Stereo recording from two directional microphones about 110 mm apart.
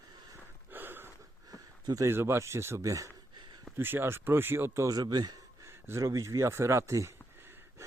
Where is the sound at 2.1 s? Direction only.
25° right (ahead or behind).